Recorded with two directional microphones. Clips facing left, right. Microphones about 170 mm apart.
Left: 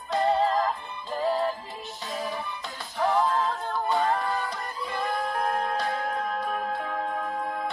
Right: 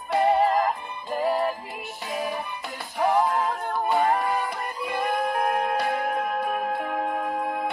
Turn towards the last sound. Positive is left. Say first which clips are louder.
# right 3 dB
turn(degrees=-20)  # may be behind; listen again after turning